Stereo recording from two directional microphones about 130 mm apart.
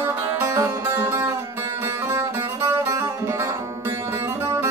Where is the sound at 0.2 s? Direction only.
25° right (ahead or behind).